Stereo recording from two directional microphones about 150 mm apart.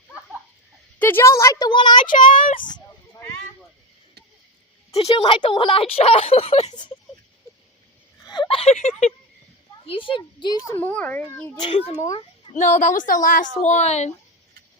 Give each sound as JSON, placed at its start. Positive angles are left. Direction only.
{"t": 0.9, "sound": "a woman's voice", "side_deg": 15}
{"t": 2.1, "sound": "a child's voice", "side_deg": 60}
{"t": 2.5, "sound": "speech", "side_deg": 30}
{"t": 4.9, "sound": "speech", "side_deg": 40}
{"t": 8.3, "sound": "a sound", "side_deg": 35}
{"t": 9.8, "sound": "speech", "side_deg": 35}
{"t": 10.8, "sound": "a child's voice", "side_deg": 10}
{"t": 11.5, "sound": "speech", "side_deg": 30}
{"t": 12.5, "sound": "a woman's voice", "side_deg": 55}